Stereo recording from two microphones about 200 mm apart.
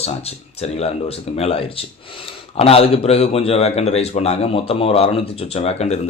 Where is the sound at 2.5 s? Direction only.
30° left (ahead or behind).